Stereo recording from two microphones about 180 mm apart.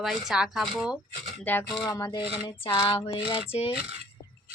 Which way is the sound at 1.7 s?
25° left (ahead or behind).